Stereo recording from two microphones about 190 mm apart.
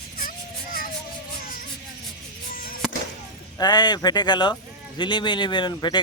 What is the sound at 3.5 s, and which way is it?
A man's voice, 20° left (ahead or behind).